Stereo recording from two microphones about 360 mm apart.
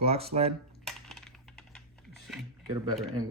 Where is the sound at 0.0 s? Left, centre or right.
Centre.